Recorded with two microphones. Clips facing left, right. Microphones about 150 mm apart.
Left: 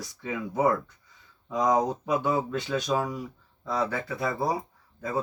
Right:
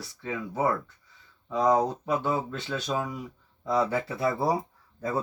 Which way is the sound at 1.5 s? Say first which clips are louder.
Right 1 dB; 15° left (ahead or behind).